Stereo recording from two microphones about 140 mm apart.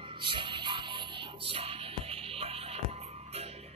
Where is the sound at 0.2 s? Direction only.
35° right (ahead or behind).